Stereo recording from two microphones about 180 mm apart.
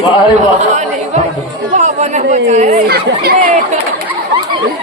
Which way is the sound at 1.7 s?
40° right (ahead or behind).